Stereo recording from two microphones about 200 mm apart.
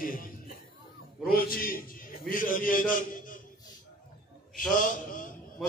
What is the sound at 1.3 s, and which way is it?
A man's voice, 45° left (ahead or behind).